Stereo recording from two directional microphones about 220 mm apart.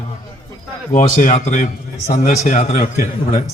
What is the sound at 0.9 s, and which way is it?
A man's voice, 35° left (ahead or behind).